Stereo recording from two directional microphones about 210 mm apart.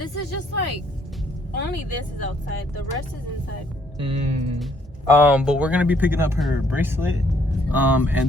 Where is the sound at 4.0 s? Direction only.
30° right (ahead or behind).